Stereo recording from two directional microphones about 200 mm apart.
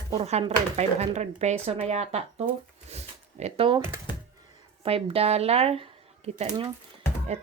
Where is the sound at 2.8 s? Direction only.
35° right (ahead or behind).